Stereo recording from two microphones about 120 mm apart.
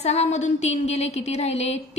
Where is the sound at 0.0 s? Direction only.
65° left (ahead or behind).